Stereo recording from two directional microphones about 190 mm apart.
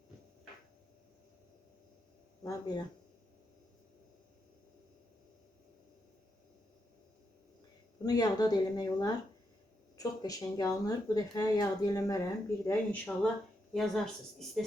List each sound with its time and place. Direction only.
2.4 s speech: 20° left (ahead or behind)
8.0 s speech: 20° left (ahead or behind); by 14.6 s centre (ahead or behind)